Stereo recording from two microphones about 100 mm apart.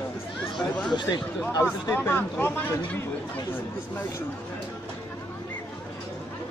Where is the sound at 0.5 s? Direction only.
5° left (ahead or behind).